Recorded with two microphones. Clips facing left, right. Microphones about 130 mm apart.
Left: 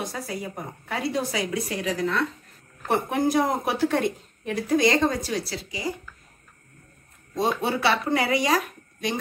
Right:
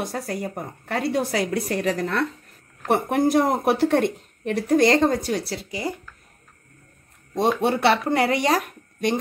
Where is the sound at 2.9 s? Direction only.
65° right (ahead or behind).